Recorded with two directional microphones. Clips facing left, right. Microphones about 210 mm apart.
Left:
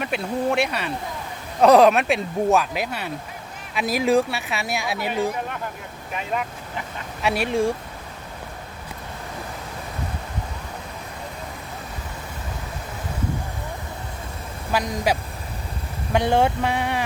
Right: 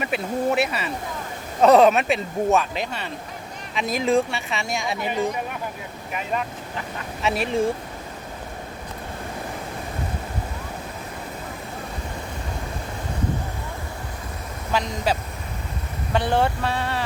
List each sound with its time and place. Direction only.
0.0 s speech: 5° right (ahead or behind)
6.3 s speech: centre (ahead or behind)
14.7 s a sound: 10° left (ahead or behind)